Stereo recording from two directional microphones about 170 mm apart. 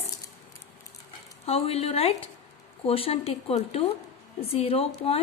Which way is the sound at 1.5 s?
35° left (ahead or behind).